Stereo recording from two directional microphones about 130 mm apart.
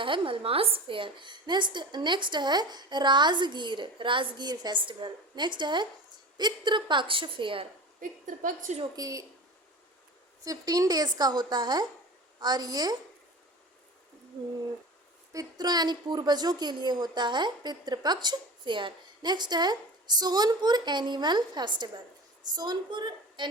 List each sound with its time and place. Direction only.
0.0 s a woman's voice: 40° right (ahead or behind)
8.4 s a woman's voice: 85° right
9.0 s a woman's voice: 25° right (ahead or behind)
10.4 s a woman's voice: 25° right (ahead or behind)
15.3 s a woman's voice: 30° right (ahead or behind)